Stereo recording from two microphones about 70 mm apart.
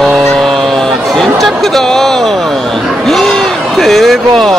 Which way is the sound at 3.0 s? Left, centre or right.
Centre.